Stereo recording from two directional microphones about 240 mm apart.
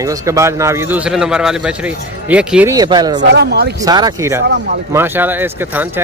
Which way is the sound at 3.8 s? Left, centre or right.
Centre.